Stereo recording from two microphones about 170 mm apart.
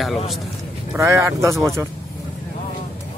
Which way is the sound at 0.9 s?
15° right (ahead or behind).